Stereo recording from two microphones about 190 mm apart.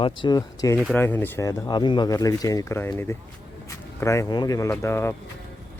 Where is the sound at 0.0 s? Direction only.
25° left (ahead or behind).